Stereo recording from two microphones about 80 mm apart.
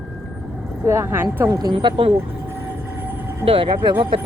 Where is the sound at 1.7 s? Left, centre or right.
Right.